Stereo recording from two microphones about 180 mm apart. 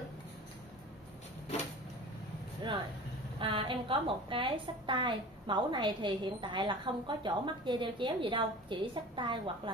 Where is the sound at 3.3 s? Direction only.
30° right (ahead or behind).